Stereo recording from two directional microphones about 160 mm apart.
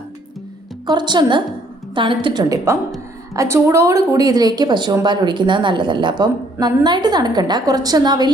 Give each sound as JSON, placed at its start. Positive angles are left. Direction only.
{"t": 0.9, "sound": "a woman's voice", "side_deg": -25}